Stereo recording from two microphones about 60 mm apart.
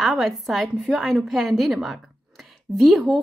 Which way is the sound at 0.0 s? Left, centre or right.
Centre.